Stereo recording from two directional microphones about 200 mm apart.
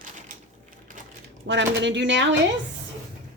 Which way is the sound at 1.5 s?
60° right (ahead or behind).